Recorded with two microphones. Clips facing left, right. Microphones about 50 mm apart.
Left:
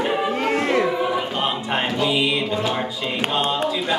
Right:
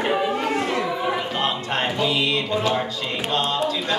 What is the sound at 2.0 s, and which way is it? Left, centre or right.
Music, centre.